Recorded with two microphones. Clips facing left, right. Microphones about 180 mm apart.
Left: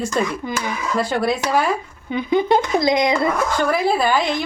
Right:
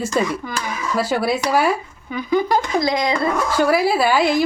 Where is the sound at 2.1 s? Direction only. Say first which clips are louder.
Left 2 dB; 25° left (ahead or behind).